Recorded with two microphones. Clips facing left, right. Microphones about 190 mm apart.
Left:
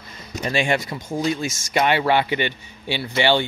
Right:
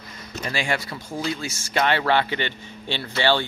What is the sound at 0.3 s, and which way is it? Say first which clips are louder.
Speech: left 5 dB; 20° left (ahead or behind).